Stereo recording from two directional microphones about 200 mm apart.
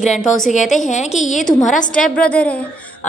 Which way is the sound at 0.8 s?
35° left (ahead or behind).